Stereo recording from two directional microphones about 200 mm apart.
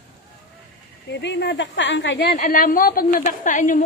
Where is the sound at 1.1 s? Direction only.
60° left (ahead or behind).